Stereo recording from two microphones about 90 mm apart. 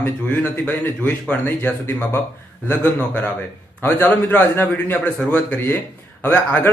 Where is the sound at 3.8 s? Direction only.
20° left (ahead or behind).